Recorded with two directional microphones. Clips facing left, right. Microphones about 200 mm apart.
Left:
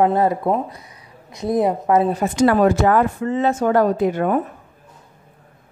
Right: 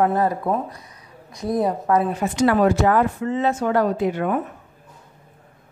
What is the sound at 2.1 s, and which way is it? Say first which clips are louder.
Speech: left 3 dB; 45° left (ahead or behind).